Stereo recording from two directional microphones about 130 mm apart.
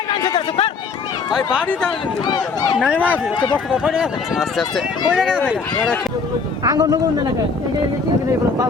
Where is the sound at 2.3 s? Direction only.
35° left (ahead or behind).